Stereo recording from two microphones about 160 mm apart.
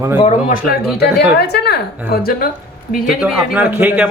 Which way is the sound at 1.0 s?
90° left.